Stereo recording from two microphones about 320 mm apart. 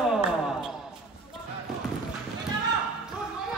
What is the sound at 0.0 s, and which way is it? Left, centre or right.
Basketball bounce, centre.